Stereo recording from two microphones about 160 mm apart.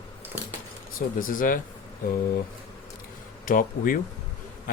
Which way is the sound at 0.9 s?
60° left (ahead or behind).